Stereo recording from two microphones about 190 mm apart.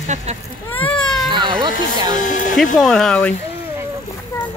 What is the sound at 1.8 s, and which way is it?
Speech, 20° right (ahead or behind).